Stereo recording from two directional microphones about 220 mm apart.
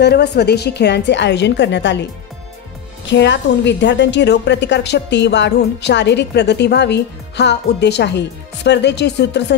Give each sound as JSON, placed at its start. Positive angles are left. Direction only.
{"t": 0.0, "sound": "a woman's voice", "side_deg": 50}
{"t": 3.1, "sound": "a woman's voice", "side_deg": 55}